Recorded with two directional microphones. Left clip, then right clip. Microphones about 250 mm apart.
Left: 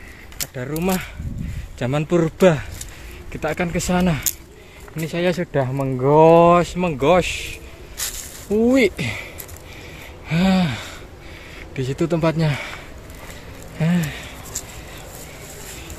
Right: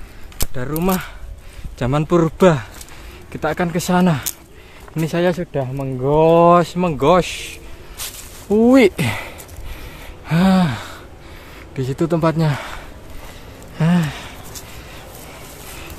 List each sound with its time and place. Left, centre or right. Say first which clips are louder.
0.6 s speech: right 3 dB; centre
5.3 s speech: left 1 dB; centre
6.4 s speech: right 2 dB; centre
10.2 s gasp: right 3 dB; centre
11.7 s speech: right 2 dB; centre
13.7 s a sound: right 3 dB; centre